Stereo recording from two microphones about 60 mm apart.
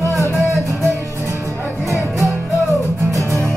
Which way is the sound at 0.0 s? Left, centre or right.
Left.